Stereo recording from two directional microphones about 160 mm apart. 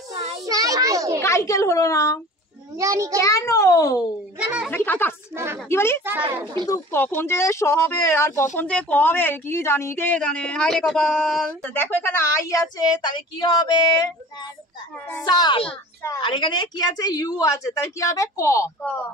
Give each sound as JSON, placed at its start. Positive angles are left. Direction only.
{"t": 0.1, "sound": "child singing", "side_deg": -45}
{"t": 0.5, "sound": "child singing", "side_deg": -20}
{"t": 1.2, "sound": "speech", "side_deg": 20}
{"t": 2.8, "sound": "a child's voice", "side_deg": -20}
{"t": 3.2, "sound": "speech", "side_deg": 20}
{"t": 4.4, "sound": "speech", "side_deg": -5}
{"t": 4.6, "sound": "a woman's voice", "side_deg": 10}
{"t": 5.3, "sound": "speech", "side_deg": -15}
{"t": 5.7, "sound": "a woman's voice", "side_deg": 15}
{"t": 15.2, "sound": "speech", "side_deg": 25}